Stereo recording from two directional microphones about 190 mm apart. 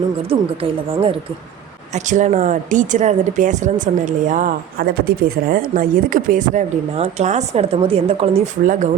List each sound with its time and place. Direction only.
0.3 s speech: 30° right (ahead or behind)
1.9 s speech: 40° right (ahead or behind)
8.6 s speech: 45° right (ahead or behind)